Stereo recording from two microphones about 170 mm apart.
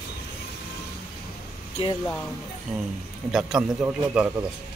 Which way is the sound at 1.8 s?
35° left (ahead or behind).